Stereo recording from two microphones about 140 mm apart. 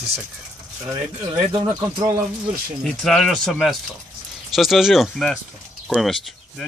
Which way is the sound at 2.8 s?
5° left (ahead or behind).